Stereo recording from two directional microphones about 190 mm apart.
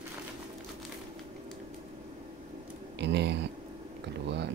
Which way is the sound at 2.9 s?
65° right (ahead or behind).